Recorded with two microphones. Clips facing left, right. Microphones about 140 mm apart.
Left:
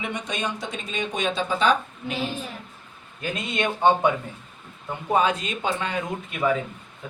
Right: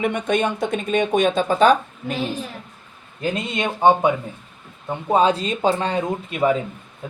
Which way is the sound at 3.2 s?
25° right (ahead or behind).